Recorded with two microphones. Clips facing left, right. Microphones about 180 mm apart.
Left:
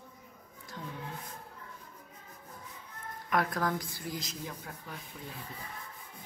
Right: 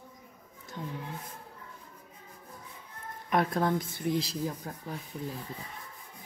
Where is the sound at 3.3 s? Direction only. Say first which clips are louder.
Right 4 dB; 25° right (ahead or behind).